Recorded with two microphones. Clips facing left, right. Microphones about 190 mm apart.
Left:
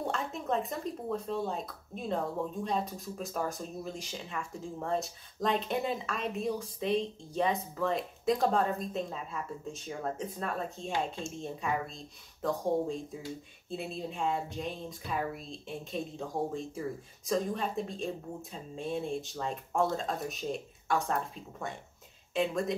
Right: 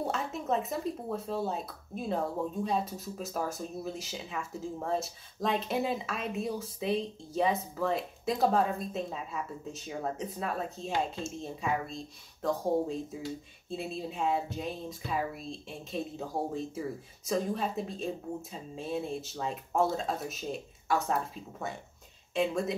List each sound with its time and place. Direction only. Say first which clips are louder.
0.0 s speech: right 1 dB; 5° right (ahead or behind)